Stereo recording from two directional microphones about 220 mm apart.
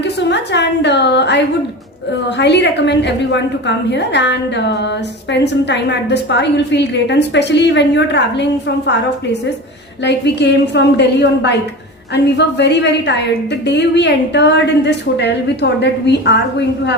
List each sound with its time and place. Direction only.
0.0 s a woman's voice: 50° left (ahead or behind)